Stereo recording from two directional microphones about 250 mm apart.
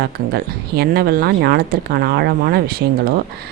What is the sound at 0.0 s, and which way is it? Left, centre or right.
Speech, right.